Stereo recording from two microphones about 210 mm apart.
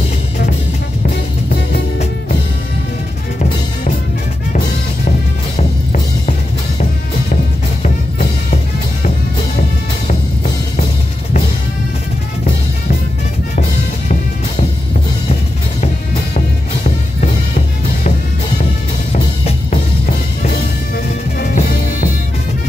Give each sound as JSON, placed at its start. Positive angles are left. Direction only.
{"t": 1.0, "sound": "music", "side_deg": 45}
{"t": 4.5, "sound": "music", "side_deg": 40}
{"t": 7.8, "sound": "music", "side_deg": 35}
{"t": 17.2, "sound": "music", "side_deg": 35}
{"t": 19.1, "sound": "music", "side_deg": 35}